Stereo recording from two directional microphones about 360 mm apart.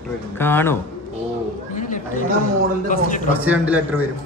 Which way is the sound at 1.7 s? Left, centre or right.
Left.